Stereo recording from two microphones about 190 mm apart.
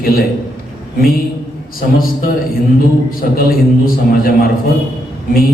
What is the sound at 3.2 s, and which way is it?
A man's voice, 50° left (ahead or behind).